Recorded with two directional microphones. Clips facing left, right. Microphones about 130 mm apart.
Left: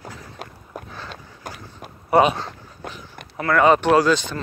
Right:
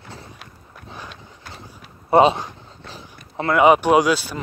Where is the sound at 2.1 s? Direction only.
25° right (ahead or behind).